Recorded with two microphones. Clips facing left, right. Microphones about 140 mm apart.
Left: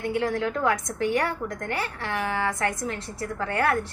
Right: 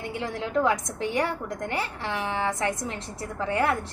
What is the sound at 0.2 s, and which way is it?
A woman's voice, 20° right (ahead or behind).